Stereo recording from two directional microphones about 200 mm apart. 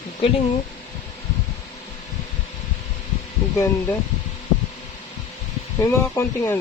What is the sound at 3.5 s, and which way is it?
Speech, 15° left (ahead or behind).